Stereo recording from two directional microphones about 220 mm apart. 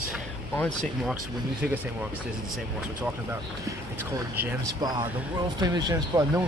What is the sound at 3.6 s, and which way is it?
Speech, 10° right (ahead or behind).